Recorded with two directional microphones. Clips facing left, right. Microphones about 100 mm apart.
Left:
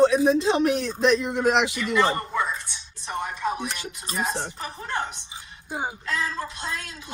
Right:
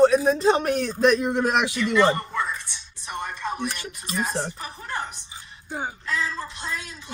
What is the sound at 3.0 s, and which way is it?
Dishes, 5° left (ahead or behind).